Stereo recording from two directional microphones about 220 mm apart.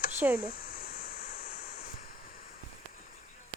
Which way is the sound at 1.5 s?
30° left (ahead or behind).